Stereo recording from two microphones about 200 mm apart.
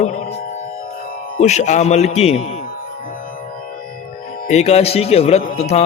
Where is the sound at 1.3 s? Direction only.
35° left (ahead or behind).